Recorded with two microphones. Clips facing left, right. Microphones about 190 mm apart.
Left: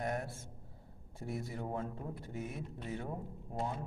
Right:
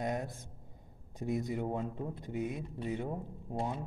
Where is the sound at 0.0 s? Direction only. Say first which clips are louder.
Right 2 dB; 20° right (ahead or behind).